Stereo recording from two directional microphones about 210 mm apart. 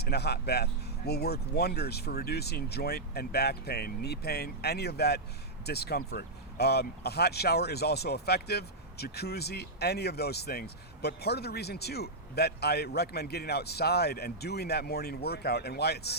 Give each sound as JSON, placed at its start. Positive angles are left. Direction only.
{"t": 0.0, "sound": "speech", "side_deg": 50}